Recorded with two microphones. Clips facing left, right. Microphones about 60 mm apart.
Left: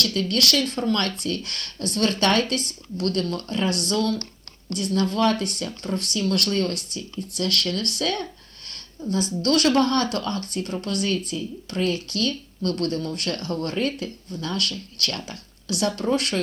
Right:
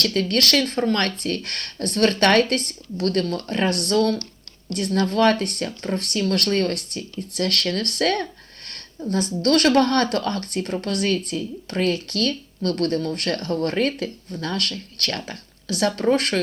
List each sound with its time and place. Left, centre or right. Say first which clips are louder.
0.0 s speech: right 2 dB; right
10.8 s speech: right 2 dB; right
13.7 s speech: right 3 dB; right